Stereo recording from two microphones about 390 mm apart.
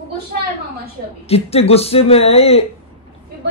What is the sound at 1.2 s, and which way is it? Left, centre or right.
Speech, centre.